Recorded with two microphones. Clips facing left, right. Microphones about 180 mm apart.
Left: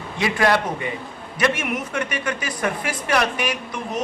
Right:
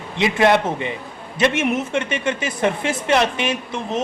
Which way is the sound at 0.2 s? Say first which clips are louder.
Right 4 dB; 20° right (ahead or behind).